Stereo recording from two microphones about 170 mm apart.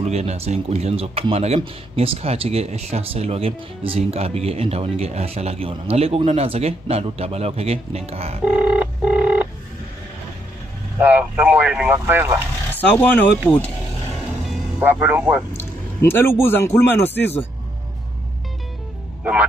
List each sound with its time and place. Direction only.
0.0 s speech: 40° right (ahead or behind)
8.5 s telephone bell ringing: 10° right (ahead or behind)
11.0 s vehicle: 10° right (ahead or behind)
12.7 s speech: 10° left (ahead or behind)
14.8 s speech: 10° right (ahead or behind)
15.5 s a man's voice: 15° left (ahead or behind)